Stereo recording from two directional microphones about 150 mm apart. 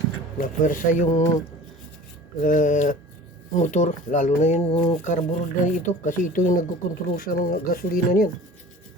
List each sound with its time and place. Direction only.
0.3 s speech: 60° left (ahead or behind)
2.4 s speech: 60° left (ahead or behind)